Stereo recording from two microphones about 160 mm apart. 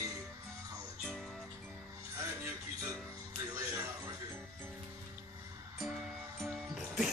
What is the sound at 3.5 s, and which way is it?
Music, 20° right (ahead or behind).